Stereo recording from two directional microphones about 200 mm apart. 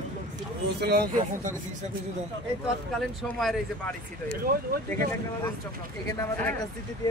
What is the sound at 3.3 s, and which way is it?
Speech, 5° left (ahead or behind).